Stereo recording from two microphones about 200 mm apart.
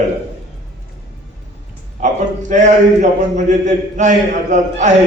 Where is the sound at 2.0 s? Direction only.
35° right (ahead or behind).